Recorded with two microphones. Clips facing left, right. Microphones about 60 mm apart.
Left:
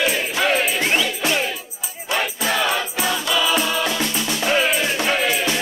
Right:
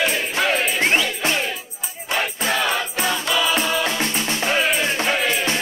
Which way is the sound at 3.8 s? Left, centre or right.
Right.